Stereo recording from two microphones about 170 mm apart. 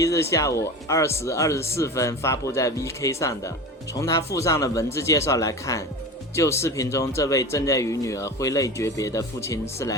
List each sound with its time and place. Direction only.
0.0 s a man's voice: 20° left (ahead or behind)